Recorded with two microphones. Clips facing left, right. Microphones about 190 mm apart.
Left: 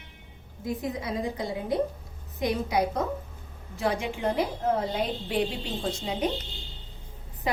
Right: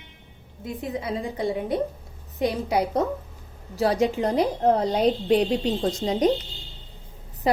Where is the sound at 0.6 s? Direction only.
25° right (ahead or behind).